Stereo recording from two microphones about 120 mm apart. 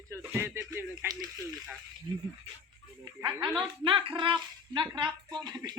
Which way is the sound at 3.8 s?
45° right (ahead or behind).